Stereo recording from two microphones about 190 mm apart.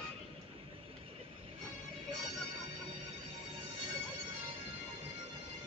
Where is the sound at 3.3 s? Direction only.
30° right (ahead or behind).